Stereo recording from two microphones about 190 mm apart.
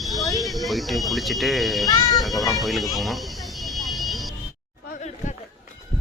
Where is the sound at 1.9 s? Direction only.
20° left (ahead or behind).